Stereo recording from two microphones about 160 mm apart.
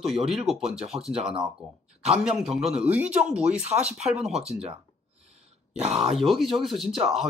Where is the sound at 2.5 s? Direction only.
40° right (ahead or behind).